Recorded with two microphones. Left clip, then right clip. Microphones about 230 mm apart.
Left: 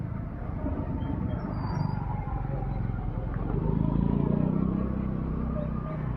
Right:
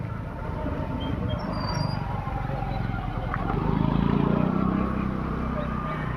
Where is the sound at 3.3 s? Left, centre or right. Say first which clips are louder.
Right 5 dB; right.